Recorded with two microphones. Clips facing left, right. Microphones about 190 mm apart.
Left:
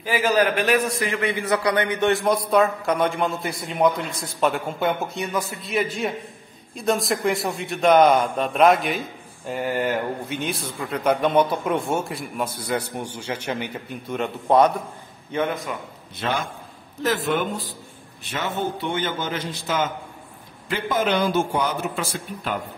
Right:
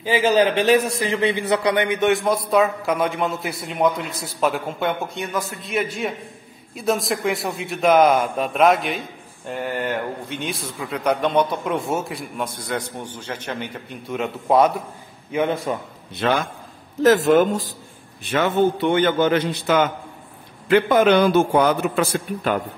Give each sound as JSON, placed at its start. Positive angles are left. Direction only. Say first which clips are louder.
{"t": 0.0, "sound": "a man's voice", "louder": "right 3 dB", "side_deg": -20}
{"t": 2.0, "sound": "a man's voice", "louder": "right 1 dB", "side_deg": 0}
{"t": 14.0, "sound": "a man's voice", "louder": "right 1 dB", "side_deg": 0}
{"t": 15.5, "sound": "a man's voice", "louder": "right 5 dB", "side_deg": -30}
{"t": 16.2, "sound": "a man's voice", "louder": "right 5 dB", "side_deg": -55}
{"t": 17.0, "sound": "speech", "louder": "right 9 dB", "side_deg": -45}
{"t": 18.3, "sound": "a man's voice", "louder": "right 8 dB", "side_deg": -60}